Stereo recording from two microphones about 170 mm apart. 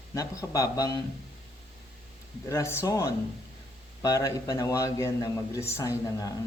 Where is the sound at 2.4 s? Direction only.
15° left (ahead or behind).